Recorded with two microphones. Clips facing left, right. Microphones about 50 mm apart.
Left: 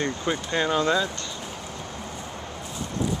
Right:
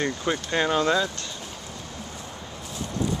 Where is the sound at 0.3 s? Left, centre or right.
Centre.